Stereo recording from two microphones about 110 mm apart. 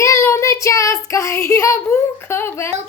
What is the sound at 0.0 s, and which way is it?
Child singing, 30° left (ahead or behind).